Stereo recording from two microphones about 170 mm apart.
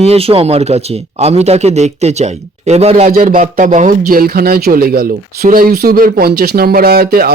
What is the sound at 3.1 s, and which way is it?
Speech, 55° right (ahead or behind).